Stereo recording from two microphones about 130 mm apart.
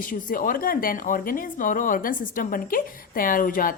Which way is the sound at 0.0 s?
90° left.